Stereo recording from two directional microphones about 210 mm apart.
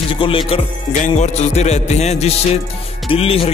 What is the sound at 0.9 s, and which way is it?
Speech, 35° left (ahead or behind).